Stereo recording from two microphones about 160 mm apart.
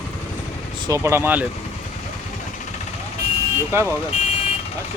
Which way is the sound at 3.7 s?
15° right (ahead or behind).